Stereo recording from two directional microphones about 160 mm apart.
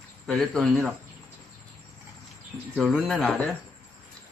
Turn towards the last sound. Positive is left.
turn(degrees=5)  # may be behind; listen again after turning